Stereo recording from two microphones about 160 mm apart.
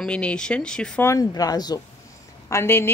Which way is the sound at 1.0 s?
20° left (ahead or behind).